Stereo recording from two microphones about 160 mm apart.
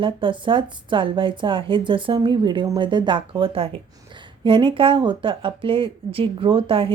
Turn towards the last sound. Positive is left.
turn(degrees=-35)  # may be behind; listen again after turning